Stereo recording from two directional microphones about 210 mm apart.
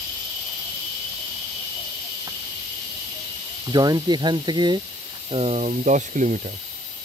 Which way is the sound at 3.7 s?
20° right (ahead or behind).